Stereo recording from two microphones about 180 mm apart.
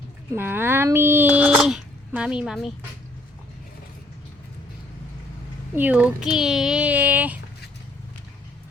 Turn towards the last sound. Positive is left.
turn(degrees=-10)  # may be behind; listen again after turning